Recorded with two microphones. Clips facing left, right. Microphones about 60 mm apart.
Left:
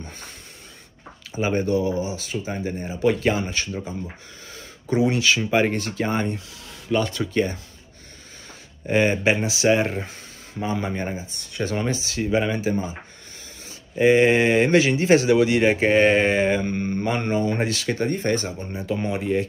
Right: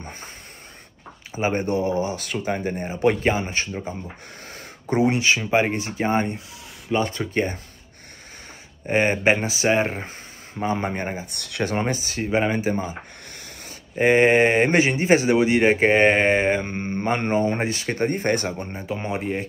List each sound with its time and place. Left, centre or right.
1.3 s speech: right
4.5 s a sound: right
5.1 s speech: right
8.8 s speech: right
11.2 s speech: right
11.6 s speech: right
13.9 s speech: right